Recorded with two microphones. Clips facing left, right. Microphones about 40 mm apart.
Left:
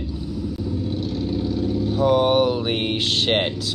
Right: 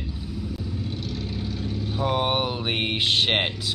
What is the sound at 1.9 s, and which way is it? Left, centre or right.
Speech, centre.